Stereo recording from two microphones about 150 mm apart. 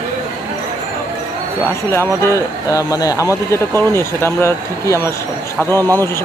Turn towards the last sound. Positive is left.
turn(degrees=-25)  # may be behind; listen again after turning